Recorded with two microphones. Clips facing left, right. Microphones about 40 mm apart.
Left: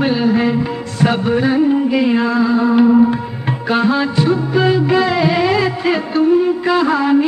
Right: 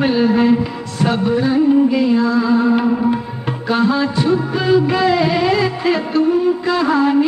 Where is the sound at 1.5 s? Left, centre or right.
Centre.